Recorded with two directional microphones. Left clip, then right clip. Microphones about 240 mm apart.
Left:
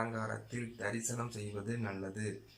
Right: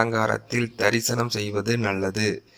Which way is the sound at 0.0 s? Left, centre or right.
Right.